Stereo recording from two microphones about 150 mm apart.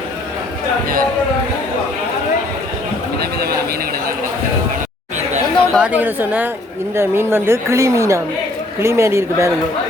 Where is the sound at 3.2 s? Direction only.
90° right.